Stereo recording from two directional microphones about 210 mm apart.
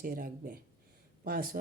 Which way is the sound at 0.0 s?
45° right (ahead or behind).